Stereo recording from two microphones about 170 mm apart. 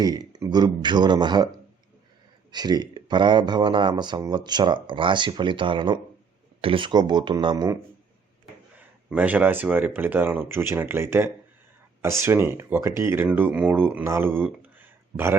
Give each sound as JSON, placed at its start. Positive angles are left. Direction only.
{"t": 0.0, "sound": "speech", "side_deg": -25}
{"t": 2.5, "sound": "speech", "side_deg": -25}
{"t": 9.0, "sound": "speech", "side_deg": -10}